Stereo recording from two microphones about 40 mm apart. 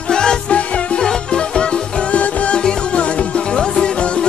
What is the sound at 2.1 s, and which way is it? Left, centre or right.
Music, left.